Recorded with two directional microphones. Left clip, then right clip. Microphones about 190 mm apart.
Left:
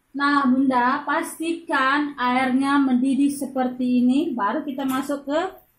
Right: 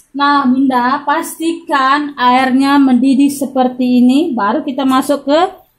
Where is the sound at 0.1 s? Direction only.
45° right (ahead or behind).